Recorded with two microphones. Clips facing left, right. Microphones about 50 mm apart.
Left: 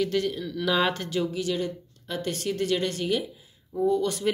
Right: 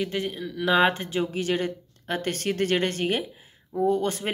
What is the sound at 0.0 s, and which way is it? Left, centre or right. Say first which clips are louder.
Speech: left 3 dB; right.